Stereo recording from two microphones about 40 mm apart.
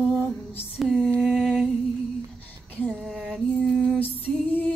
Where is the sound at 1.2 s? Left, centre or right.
Centre.